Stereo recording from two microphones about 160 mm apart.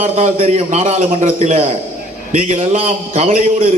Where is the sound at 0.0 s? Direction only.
40° right (ahead or behind).